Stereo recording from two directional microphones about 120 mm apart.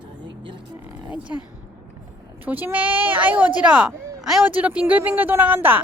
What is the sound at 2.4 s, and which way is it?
Speech, 15° right (ahead or behind).